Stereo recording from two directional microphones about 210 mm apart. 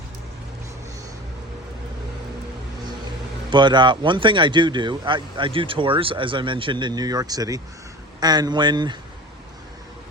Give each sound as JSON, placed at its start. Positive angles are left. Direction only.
{"t": 3.5, "sound": "speech", "side_deg": -20}